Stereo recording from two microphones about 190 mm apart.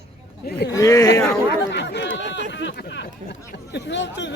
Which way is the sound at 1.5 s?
65° left (ahead or behind).